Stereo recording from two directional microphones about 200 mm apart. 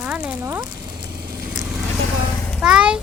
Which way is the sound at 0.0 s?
5° right (ahead or behind).